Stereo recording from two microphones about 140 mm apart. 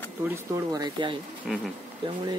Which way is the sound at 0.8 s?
35° right (ahead or behind).